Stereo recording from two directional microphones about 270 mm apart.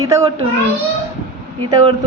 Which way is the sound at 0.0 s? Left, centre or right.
Centre.